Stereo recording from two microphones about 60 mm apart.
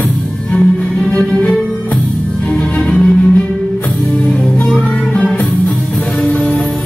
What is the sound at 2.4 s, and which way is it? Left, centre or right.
Music, left.